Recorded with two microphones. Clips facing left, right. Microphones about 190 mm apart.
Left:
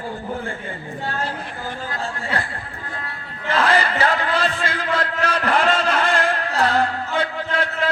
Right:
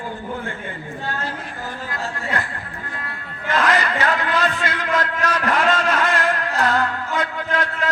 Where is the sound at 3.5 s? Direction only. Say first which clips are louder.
Left 1 dB; 30° left (ahead or behind).